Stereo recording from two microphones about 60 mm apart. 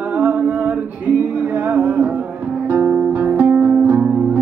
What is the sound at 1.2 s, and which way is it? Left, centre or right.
Music, right.